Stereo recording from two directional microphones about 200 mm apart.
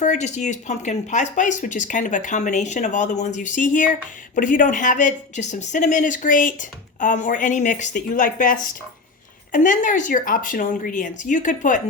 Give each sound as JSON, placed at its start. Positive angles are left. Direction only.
{"t": 0.0, "sound": "speech", "side_deg": 35}